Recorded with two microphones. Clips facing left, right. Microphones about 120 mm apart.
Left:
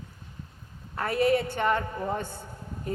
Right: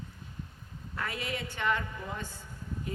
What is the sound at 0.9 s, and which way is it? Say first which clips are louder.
A woman's voice: left 12 dB; 45° left (ahead or behind).